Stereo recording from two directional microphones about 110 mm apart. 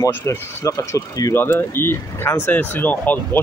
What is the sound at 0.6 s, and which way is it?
Speech, 30° left (ahead or behind).